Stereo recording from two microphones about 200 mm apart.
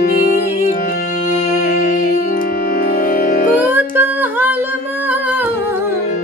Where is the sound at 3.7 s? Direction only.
10° right (ahead or behind).